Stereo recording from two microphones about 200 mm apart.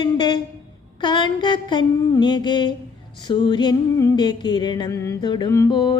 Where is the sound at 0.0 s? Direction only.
20° left (ahead or behind).